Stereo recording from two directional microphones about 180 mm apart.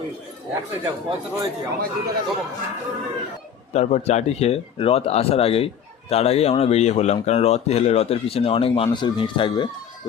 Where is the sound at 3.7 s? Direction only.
40° left (ahead or behind).